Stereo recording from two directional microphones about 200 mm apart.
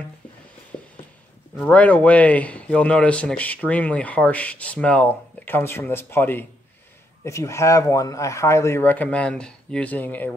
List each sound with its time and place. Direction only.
1.6 s a man's voice: 5° left (ahead or behind)